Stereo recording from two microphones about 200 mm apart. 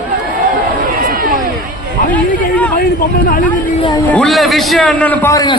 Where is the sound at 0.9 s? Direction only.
45° right (ahead or behind).